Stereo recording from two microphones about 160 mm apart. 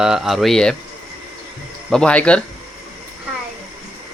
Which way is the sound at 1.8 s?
5° left (ahead or behind).